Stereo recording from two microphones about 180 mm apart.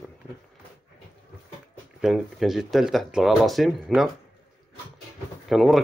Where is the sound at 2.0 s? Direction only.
Centre (ahead or behind).